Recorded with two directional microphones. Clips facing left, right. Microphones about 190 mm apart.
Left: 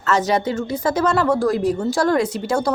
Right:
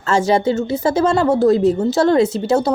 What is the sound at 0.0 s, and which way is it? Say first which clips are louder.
Speech: right 3 dB; 30° right (ahead or behind).